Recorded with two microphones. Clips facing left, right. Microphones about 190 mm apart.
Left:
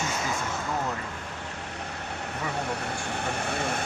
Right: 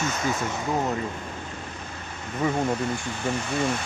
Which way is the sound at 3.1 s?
60° left (ahead or behind).